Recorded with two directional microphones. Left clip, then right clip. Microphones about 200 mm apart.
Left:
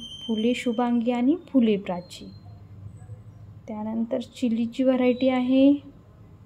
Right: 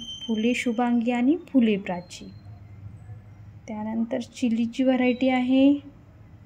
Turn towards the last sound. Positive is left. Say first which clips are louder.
# left 1 dB
turn(degrees=50)  # may be behind; listen again after turning